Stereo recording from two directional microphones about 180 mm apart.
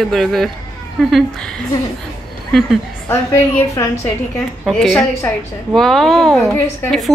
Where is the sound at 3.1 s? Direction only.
15° left (ahead or behind).